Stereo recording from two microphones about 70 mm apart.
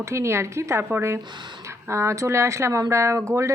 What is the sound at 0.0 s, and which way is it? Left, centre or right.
A woman's voice, right.